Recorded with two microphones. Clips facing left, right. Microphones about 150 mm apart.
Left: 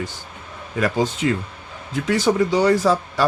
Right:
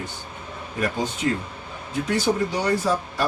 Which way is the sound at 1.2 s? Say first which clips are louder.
Left 1 dB; 90° left.